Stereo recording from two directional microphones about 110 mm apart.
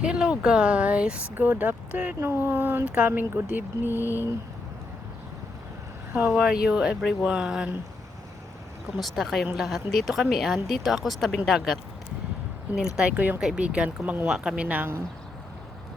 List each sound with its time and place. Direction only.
0.0 s speech: 10° right (ahead or behind)
6.2 s speech: 5° right (ahead or behind)
9.0 s speech: centre (ahead or behind); by 14.9 s 15° right (ahead or behind)